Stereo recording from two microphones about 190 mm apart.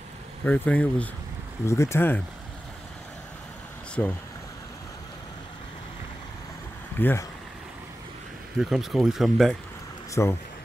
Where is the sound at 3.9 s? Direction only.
10° left (ahead or behind).